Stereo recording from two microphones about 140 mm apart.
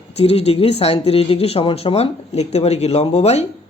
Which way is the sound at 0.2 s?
45° left (ahead or behind).